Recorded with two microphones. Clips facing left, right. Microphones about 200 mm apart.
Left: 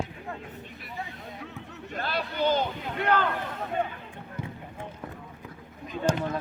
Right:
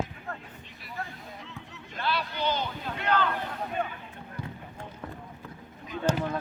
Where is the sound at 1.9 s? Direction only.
45° left (ahead or behind).